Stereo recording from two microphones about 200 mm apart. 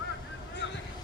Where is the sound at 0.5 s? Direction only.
60° left (ahead or behind).